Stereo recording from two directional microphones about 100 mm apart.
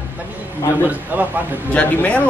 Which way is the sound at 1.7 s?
15° left (ahead or behind).